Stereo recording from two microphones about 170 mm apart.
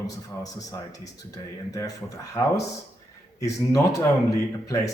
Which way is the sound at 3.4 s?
20° left (ahead or behind).